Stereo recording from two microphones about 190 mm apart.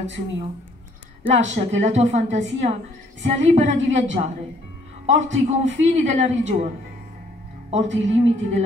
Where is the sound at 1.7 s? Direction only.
35° right (ahead or behind).